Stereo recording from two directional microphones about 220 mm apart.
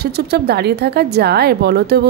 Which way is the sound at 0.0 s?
45° right (ahead or behind).